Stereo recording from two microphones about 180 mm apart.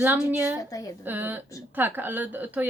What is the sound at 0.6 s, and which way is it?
Speech, 20° left (ahead or behind).